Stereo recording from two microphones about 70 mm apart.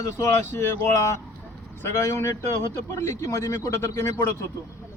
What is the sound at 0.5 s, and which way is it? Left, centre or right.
Speech, left.